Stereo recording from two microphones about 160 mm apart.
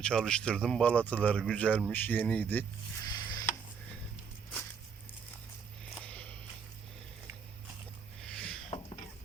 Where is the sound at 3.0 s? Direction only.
25° left (ahead or behind).